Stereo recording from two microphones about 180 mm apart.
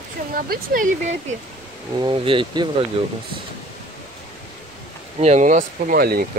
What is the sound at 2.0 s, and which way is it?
Speech, 30° right (ahead or behind).